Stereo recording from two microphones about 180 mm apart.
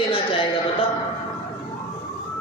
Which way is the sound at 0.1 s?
30° left (ahead or behind).